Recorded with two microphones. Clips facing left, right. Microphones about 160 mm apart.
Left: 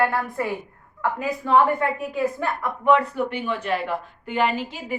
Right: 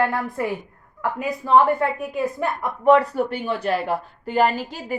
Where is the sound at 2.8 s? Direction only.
35° right (ahead or behind).